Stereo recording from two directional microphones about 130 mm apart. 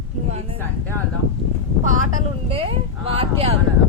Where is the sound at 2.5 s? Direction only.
45° right (ahead or behind).